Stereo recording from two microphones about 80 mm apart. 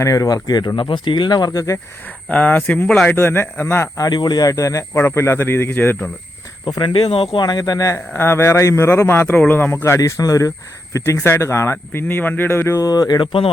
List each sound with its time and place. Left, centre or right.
0.0 s speech: left
0.8 s speech: left
2.3 s a man's voice: left
3.1 s a man's voice: left
4.1 s speech: left
4.9 s a man's voice: left
6.7 s speech: left
7.9 s a man's voice: left
10.0 s speech: left
12.8 s speech: left